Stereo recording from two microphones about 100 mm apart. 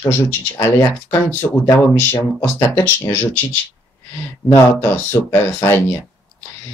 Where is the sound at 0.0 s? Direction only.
25° left (ahead or behind).